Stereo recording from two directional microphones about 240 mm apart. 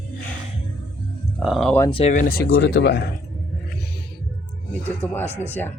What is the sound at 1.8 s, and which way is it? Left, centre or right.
Speech, left.